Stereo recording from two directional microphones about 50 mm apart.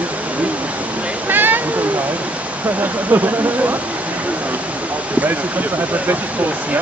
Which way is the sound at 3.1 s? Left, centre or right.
Right.